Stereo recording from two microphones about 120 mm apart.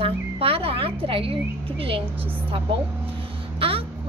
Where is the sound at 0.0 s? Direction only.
50° right (ahead or behind).